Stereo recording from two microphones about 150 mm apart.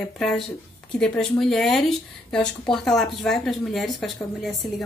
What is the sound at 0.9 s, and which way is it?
A woman's voice, 5° left (ahead or behind).